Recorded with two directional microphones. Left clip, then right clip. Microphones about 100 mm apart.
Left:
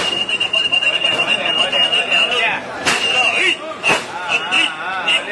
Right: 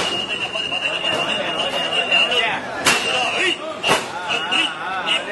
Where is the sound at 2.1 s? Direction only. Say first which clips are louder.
Left 2 dB; centre (ahead or behind).